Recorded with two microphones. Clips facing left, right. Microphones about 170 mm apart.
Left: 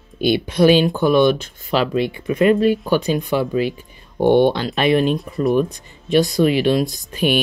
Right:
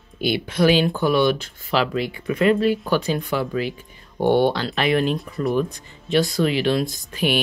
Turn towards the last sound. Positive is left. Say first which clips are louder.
# left 4 dB
turn(degrees=20)  # may be behind; listen again after turning